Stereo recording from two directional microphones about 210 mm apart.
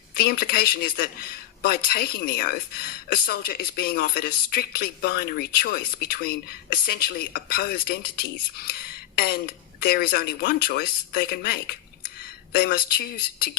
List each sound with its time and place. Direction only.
0.1 s speech: 45° left (ahead or behind)